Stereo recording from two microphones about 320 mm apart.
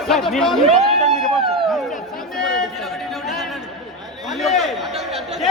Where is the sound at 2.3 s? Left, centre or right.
Centre.